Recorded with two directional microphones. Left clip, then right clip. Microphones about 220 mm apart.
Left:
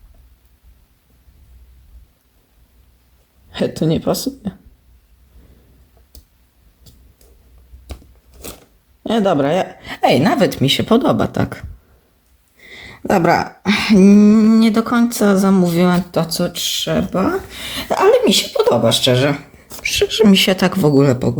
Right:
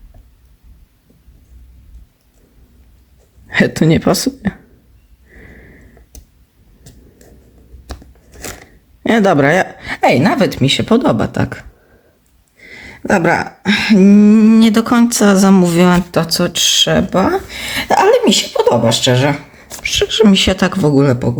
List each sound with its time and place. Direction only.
3.5 s speech: 20° right (ahead or behind)
9.0 s speech: 20° right (ahead or behind); by 21.3 s 5° left (ahead or behind)